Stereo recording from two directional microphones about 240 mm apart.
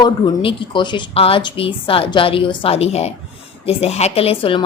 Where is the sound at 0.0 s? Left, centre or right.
Centre.